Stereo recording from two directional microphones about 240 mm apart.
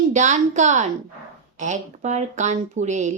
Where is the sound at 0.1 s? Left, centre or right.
Right.